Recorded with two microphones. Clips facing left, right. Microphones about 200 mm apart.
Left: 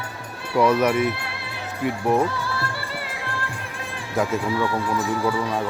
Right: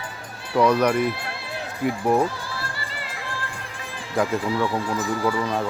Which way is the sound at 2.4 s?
65° left (ahead or behind).